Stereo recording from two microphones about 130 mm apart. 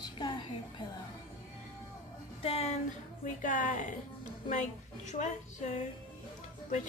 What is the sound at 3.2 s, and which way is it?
Speech, 85° left.